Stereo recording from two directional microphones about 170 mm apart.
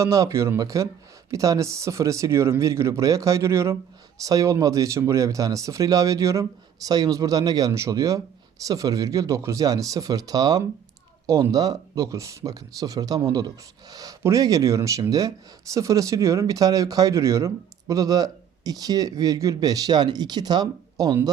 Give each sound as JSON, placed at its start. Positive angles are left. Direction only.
{"t": 0.0, "sound": "speech", "side_deg": -20}